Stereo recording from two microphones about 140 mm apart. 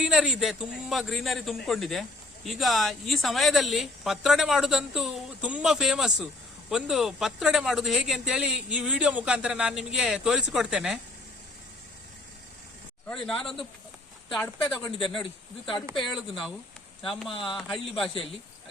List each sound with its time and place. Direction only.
0.0 s a man's voice: 5° right (ahead or behind)
13.1 s a man's voice: 5° left (ahead or behind)
14.8 s speech: 35° left (ahead or behind)
16.0 s a man's voice: centre (ahead or behind)